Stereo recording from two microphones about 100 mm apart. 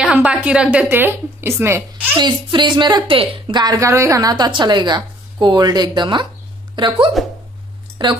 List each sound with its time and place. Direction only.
0.0 s a woman's voice: 15° right (ahead or behind)
2.1 s a woman's voice: 50° right (ahead or behind)
3.8 s a woman's voice: 30° right (ahead or behind); by 8.1 s 50° right (ahead or behind)